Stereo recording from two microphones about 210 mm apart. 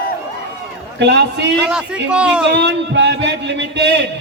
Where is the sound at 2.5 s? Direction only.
55° right (ahead or behind).